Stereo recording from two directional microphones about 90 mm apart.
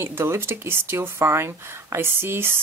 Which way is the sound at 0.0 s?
30° right (ahead or behind).